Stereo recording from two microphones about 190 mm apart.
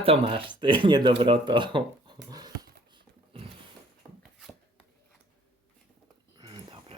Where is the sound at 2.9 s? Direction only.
30° right (ahead or behind).